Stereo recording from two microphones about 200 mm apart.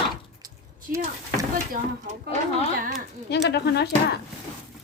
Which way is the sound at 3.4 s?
55° left (ahead or behind).